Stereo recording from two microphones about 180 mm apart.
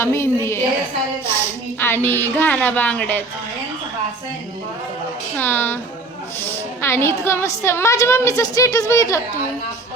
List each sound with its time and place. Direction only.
0.0 s a woman's voice: 15° left (ahead or behind)
1.8 s a woman's voice: 10° left (ahead or behind)
5.4 s a woman's voice: 10° left (ahead or behind)